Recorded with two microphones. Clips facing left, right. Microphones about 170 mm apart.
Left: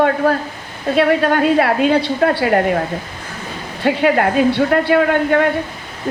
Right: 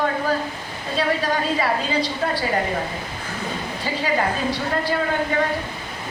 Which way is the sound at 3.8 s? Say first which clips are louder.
Left 9 dB; 65° left (ahead or behind).